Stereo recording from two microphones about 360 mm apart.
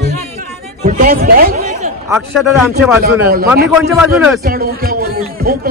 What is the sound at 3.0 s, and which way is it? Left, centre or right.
Speech, right.